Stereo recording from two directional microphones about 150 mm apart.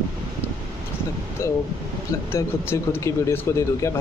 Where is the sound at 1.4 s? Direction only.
15° left (ahead or behind).